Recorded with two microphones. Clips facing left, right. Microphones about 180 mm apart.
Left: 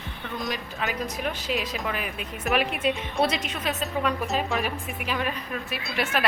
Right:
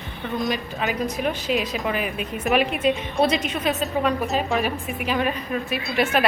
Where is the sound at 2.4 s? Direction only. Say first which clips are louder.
Right 4 dB; centre (ahead or behind).